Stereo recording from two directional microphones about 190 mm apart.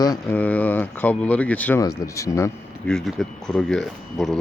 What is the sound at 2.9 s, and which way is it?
Speech, centre (ahead or behind).